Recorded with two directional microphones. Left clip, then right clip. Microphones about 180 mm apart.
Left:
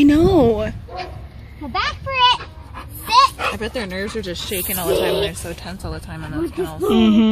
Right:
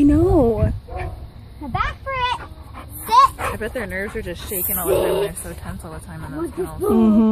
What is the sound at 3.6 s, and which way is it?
Speech, 55° left (ahead or behind).